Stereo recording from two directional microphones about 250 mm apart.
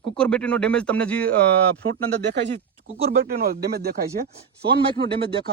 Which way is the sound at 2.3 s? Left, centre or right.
Right.